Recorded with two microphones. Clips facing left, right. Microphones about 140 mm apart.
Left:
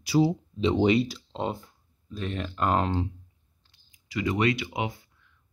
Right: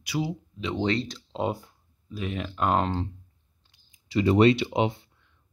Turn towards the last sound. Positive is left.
turn(degrees=-25)  # may be behind; listen again after turning